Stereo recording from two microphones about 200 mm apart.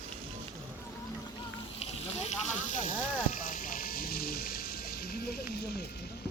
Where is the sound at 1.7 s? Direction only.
35° left (ahead or behind); by 5.4 s 50° left (ahead or behind).